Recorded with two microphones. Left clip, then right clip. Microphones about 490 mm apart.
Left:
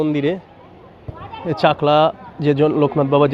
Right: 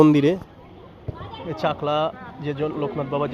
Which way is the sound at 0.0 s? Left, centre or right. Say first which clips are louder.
Right 3 dB; right.